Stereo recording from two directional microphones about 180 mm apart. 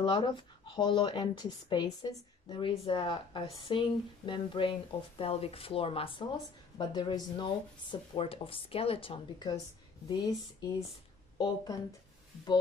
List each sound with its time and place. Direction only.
0.0 s speech: 25° left (ahead or behind)